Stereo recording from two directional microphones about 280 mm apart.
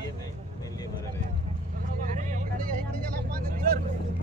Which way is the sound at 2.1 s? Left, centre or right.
Right.